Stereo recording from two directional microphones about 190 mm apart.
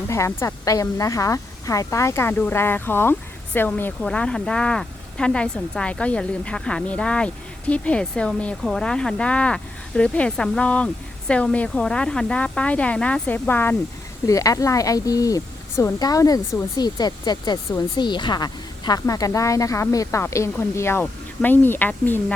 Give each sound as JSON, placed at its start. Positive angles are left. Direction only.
{"t": 0.1, "sound": "speech", "side_deg": 15}